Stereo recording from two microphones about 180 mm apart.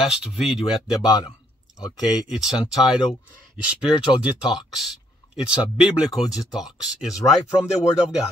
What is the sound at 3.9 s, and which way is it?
Speech, 25° left (ahead or behind).